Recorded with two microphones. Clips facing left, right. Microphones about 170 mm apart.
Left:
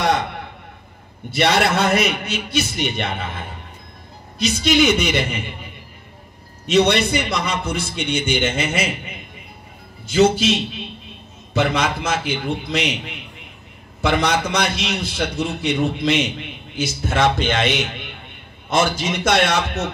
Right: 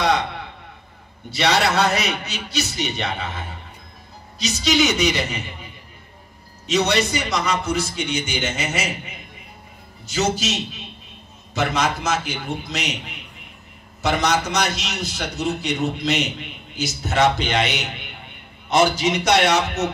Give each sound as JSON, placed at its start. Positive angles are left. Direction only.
{"t": 1.3, "sound": "a man's voice", "side_deg": 55}
{"t": 6.7, "sound": "a man's voice", "side_deg": 55}
{"t": 10.0, "sound": "a man's voice", "side_deg": 55}
{"t": 11.7, "sound": "a man's voice", "side_deg": 55}
{"t": 14.0, "sound": "a man's voice", "side_deg": 55}